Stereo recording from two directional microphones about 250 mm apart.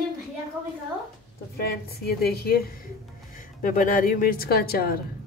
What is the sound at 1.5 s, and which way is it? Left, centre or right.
A woman's voice, left.